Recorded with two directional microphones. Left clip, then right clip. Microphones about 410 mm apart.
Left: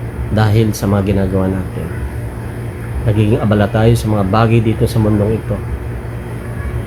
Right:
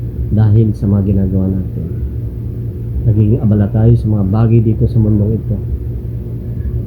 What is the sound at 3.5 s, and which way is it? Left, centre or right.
Speech, centre.